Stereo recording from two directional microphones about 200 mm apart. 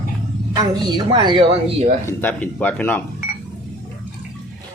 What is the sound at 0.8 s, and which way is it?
Speech, 20° right (ahead or behind).